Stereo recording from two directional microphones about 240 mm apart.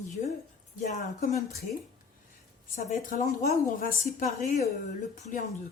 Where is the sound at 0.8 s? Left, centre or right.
Left.